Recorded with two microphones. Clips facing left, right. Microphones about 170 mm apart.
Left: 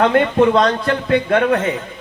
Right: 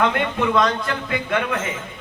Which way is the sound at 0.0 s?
35° left (ahead or behind).